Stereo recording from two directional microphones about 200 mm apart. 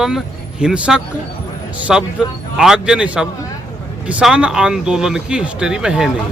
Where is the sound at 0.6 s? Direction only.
5° right (ahead or behind).